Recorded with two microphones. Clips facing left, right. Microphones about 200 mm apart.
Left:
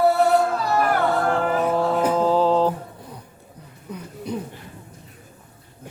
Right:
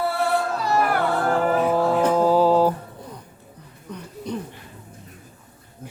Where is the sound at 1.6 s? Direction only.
5° right (ahead or behind).